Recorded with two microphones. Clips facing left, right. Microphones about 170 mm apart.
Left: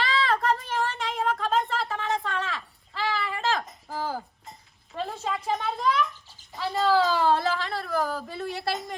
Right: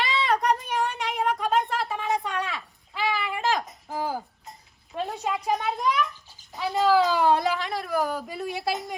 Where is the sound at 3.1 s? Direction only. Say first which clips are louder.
Right 1 dB; 15° right (ahead or behind).